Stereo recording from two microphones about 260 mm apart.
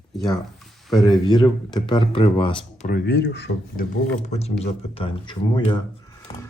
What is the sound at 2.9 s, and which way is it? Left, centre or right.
Speech, left.